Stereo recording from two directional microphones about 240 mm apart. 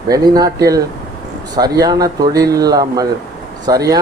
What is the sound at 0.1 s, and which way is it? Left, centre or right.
Speech, centre.